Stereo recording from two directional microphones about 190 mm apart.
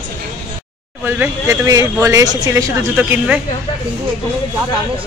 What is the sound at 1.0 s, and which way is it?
Speech, 10° right (ahead or behind).